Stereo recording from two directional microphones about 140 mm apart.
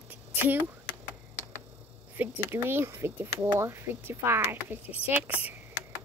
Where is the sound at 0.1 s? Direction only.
15° right (ahead or behind).